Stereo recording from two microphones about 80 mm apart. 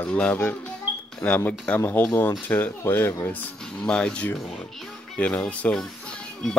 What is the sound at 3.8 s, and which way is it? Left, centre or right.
Speech, centre.